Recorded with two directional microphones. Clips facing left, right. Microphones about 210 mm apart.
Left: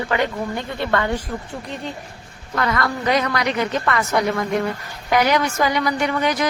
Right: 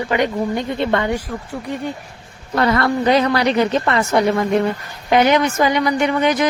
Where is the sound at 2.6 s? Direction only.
30° right (ahead or behind).